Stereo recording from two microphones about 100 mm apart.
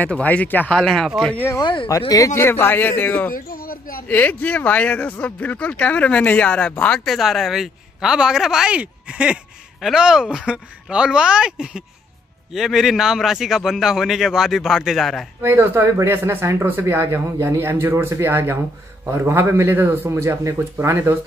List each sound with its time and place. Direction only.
0.0 s speech: 15° left (ahead or behind)
0.7 s a man's voice: 5° left (ahead or behind)
1.6 s speech: 55° left (ahead or behind)
1.9 s speech: 35° left (ahead or behind)
2.4 s speech: 20° left (ahead or behind)
7.1 s a man's voice: centre (ahead or behind)
15.4 s speech: 20° right (ahead or behind)